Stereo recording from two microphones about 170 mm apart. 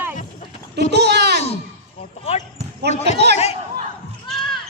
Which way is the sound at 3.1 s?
80° right.